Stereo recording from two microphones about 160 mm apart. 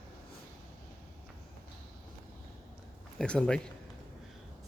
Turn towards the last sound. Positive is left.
turn(degrees=5)  # may be behind; listen again after turning